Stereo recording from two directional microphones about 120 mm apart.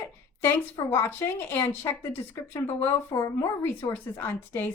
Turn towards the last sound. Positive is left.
turn(degrees=15)  # may be behind; listen again after turning